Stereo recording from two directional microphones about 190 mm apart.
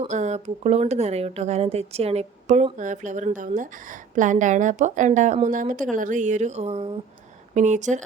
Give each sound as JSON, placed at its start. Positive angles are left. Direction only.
{"t": 0.0, "sound": "speech", "side_deg": -40}